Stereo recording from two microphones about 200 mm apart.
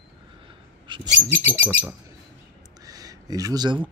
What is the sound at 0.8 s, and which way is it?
Mouse, 25° right (ahead or behind).